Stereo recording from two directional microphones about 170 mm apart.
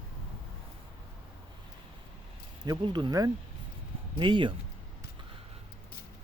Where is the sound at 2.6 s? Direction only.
25° right (ahead or behind).